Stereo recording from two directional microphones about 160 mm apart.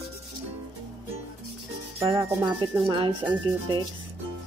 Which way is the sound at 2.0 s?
30° right (ahead or behind).